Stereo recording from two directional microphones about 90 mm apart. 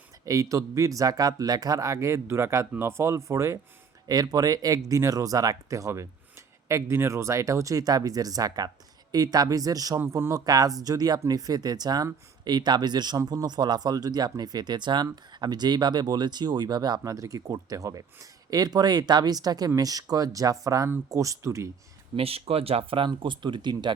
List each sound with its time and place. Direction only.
0.3 s speech: 40° right (ahead or behind)
4.0 s speech: 45° right (ahead or behind)
10.0 s speech: 30° right (ahead or behind)
22.1 s speech: 90° right; by 23.9 s 60° right (ahead or behind)